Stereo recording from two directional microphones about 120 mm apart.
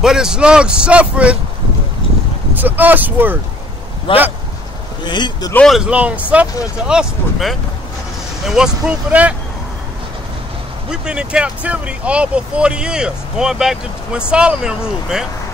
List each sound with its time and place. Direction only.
0.0 s speech: 5° right (ahead or behind)
2.5 s speech: 15° right (ahead or behind)
4.1 s speech: 45° left (ahead or behind)
5.7 s speech: 10° right (ahead or behind)
10.9 s speech: 5° right (ahead or behind)